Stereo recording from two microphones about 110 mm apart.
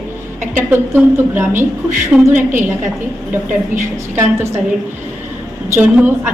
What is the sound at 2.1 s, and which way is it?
Speech, 10° right (ahead or behind).